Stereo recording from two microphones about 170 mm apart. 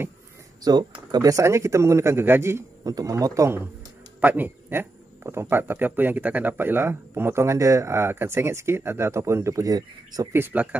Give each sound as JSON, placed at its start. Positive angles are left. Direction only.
{"t": 1.1, "sound": "speech", "side_deg": -20}